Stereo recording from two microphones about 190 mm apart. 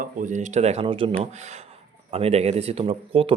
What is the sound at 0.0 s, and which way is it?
A man's voice, 40° right (ahead or behind).